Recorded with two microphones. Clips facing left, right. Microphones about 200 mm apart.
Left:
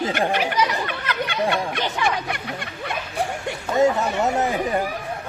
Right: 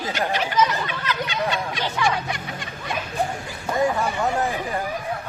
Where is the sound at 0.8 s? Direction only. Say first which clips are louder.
Left 1 dB; 60° left (ahead or behind).